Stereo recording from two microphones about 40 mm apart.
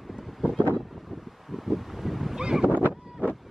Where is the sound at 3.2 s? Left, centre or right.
Right.